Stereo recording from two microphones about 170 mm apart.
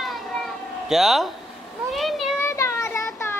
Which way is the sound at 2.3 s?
15° left (ahead or behind).